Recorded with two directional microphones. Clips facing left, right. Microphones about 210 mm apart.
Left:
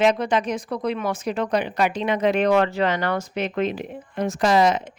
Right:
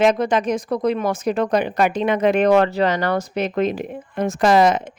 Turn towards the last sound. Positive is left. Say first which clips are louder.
# right 3 dB
turn(degrees=-55)  # may be behind; listen again after turning